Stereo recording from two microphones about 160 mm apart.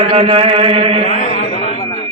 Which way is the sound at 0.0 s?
40° right (ahead or behind).